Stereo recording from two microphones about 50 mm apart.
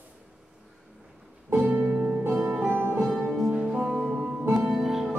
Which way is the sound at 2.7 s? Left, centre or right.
Right.